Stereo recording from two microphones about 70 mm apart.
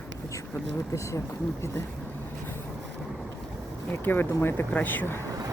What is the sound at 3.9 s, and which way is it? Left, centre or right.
Speech, left.